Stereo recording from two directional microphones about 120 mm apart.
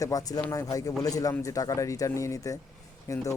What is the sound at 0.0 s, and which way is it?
Speech, 30° left (ahead or behind).